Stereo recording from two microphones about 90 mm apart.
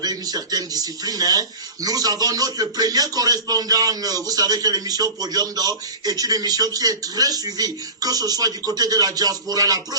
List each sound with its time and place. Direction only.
0.0 s speech: 45° right (ahead or behind)